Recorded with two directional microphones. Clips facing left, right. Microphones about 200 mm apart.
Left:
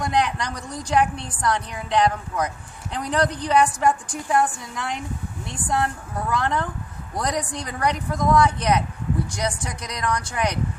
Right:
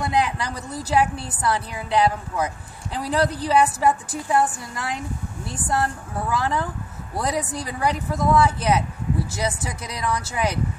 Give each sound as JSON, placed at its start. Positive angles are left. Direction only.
{"t": 0.0, "sound": "a woman's voice", "side_deg": -5}